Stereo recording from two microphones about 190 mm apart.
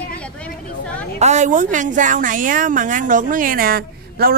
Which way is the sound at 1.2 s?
40° right (ahead or behind).